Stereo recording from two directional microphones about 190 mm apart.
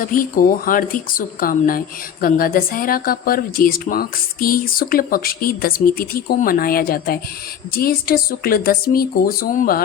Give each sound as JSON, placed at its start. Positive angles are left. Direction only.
{"t": 0.0, "sound": "speech", "side_deg": 45}